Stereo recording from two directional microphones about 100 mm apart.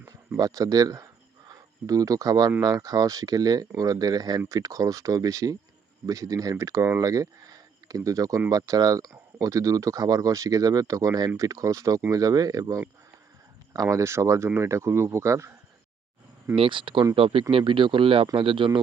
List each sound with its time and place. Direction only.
0.3 s speech: 40° right (ahead or behind)
16.6 s speech: 60° right (ahead or behind)